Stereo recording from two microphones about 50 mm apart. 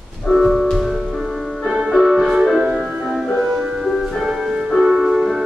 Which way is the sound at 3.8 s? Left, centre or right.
Centre.